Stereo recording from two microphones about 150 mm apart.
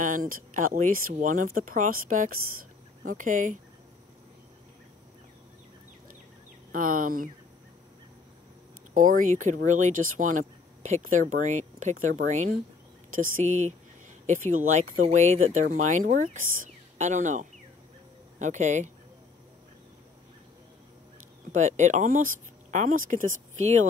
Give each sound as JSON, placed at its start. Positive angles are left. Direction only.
{"t": 0.0, "sound": "speech", "side_deg": -65}
{"t": 6.7, "sound": "speech", "side_deg": -65}
{"t": 8.9, "sound": "speech", "side_deg": -65}
{"t": 21.5, "sound": "speech", "side_deg": -55}